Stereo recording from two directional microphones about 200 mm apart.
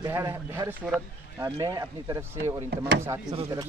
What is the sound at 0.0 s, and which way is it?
Speech, 15° right (ahead or behind).